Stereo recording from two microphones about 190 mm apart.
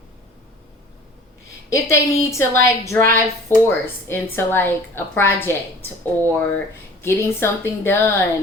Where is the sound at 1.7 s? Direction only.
15° left (ahead or behind).